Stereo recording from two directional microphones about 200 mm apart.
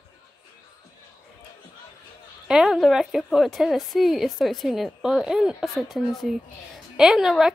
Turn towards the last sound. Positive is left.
turn(degrees=0)  # may be behind; listen again after turning